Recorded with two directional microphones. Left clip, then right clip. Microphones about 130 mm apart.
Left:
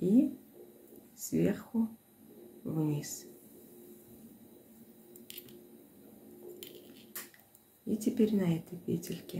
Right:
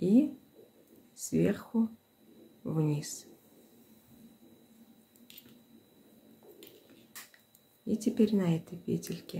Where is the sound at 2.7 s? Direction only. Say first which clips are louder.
Right 1 dB; 30° right (ahead or behind).